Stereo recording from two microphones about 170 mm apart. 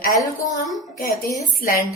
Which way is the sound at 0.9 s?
60° left (ahead or behind).